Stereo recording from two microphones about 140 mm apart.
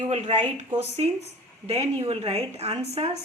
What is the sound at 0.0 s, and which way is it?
A woman's voice, 55° right (ahead or behind).